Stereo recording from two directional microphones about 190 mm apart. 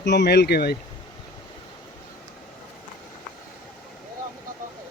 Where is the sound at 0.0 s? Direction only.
65° left (ahead or behind).